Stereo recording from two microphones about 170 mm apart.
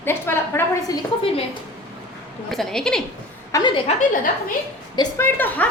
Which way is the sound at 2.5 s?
Centre (ahead or behind).